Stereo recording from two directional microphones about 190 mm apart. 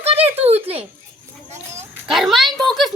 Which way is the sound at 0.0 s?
30° right (ahead or behind).